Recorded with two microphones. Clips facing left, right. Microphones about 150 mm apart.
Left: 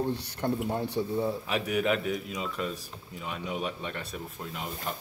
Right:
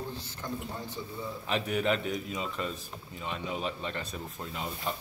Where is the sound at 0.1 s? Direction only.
65° left (ahead or behind).